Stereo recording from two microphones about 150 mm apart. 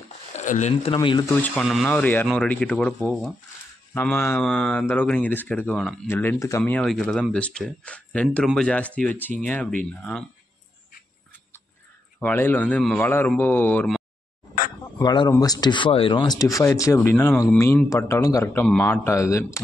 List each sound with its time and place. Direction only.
0.3 s speech: 50° left (ahead or behind)
0.9 s speech: 30° left (ahead or behind)
1.3 s speech: 10° left (ahead or behind)
3.9 s speech: 15° left (ahead or behind)
12.2 s speech: 15° left (ahead or behind)
15.0 s speech: 25° left (ahead or behind)